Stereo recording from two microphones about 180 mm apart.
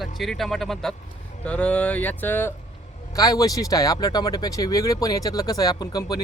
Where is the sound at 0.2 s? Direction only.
Centre (ahead or behind).